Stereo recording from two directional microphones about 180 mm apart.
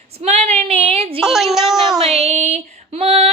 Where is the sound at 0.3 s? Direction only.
35° right (ahead or behind).